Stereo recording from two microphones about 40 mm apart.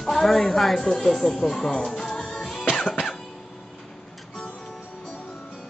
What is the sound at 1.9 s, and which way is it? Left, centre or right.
Music, centre.